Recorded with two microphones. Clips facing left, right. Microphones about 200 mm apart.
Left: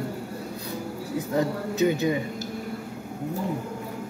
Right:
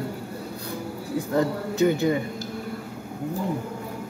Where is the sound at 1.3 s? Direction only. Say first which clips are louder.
Right 2 dB; 20° left (ahead or behind).